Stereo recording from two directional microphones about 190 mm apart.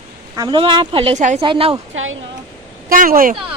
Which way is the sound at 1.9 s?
90° right.